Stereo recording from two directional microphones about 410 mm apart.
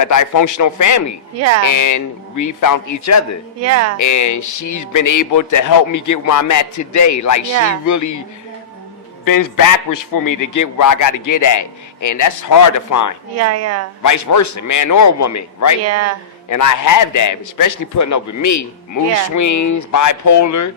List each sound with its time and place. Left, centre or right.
0.0 s a man's voice: left
1.4 s a woman's voice: right
1.6 s a man's voice: left
3.6 s a woman's voice: right
3.9 s a man's voice: left
9.2 s a man's voice: left
13.3 s a woman's voice: right
14.0 s a man's voice: left
15.8 s a woman's voice: right
16.5 s a man's voice: left